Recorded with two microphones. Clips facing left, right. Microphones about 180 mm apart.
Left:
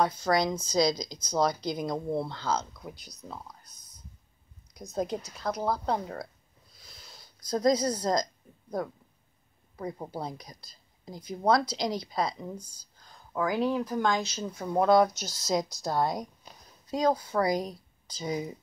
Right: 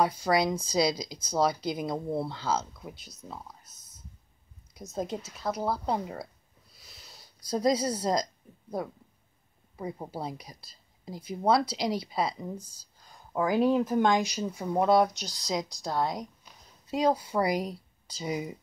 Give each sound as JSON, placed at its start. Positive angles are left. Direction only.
{"t": 0.0, "sound": "speech", "side_deg": -10}
{"t": 6.8, "sound": "a sound", "side_deg": -5}
{"t": 9.8, "sound": "speech", "side_deg": -5}
{"t": 13.1, "sound": "speech", "side_deg": -20}
{"t": 16.9, "sound": "speech", "side_deg": -10}